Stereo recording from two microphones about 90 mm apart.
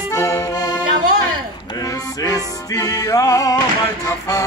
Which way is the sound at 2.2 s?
40° left (ahead or behind).